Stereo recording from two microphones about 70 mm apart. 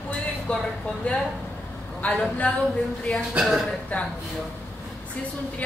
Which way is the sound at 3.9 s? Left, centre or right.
Left.